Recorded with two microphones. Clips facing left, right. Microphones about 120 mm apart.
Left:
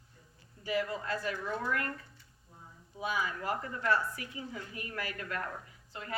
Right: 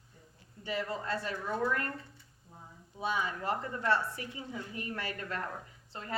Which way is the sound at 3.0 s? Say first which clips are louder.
Right 1 dB; 30° right (ahead or behind).